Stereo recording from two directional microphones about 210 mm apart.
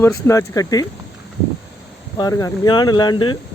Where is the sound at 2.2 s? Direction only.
15° left (ahead or behind).